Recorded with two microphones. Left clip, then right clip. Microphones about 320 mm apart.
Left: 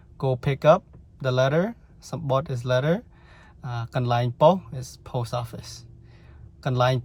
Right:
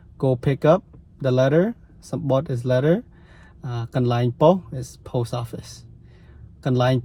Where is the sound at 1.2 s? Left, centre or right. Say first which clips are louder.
Right 4 dB; left.